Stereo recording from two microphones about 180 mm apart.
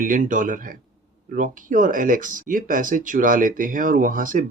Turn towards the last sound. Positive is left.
turn(degrees=-50)  # may be behind; listen again after turning